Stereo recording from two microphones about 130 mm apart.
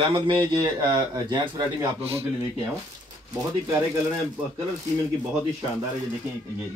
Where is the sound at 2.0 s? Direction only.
50° right (ahead or behind).